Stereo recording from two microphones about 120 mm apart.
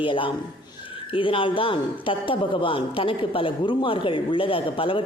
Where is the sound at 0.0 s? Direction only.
45° left (ahead or behind).